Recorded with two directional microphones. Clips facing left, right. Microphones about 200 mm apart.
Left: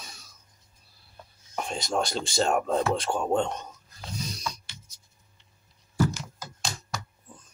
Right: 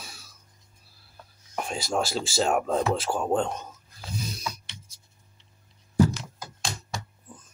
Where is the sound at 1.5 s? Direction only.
5° right (ahead or behind).